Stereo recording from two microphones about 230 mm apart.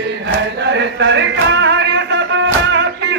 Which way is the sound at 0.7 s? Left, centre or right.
Right.